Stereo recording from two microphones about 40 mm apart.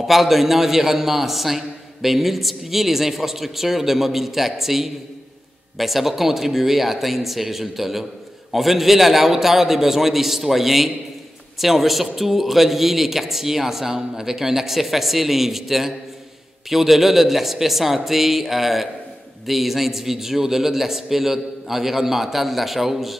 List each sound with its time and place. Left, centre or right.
0.0 s speech: centre